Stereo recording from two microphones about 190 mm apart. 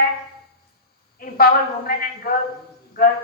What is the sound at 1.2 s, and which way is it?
A woman's voice, 50° left (ahead or behind).